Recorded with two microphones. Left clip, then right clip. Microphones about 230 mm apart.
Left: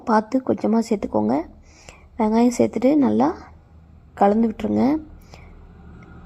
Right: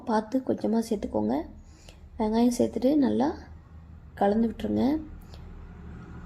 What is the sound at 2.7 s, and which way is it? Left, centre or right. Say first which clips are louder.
Speech: left 6 dB; left.